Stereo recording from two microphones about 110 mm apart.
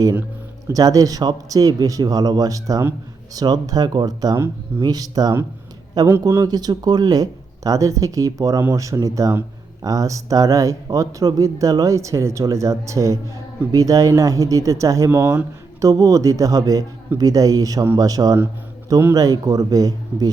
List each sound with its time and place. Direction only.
0.7 s a man's voice: 30° right (ahead or behind)